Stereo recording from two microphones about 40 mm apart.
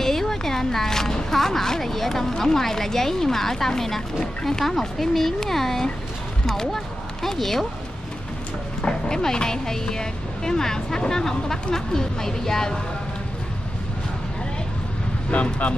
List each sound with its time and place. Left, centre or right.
0.0 s speech: centre
8.8 s speech: centre
15.3 s speech: left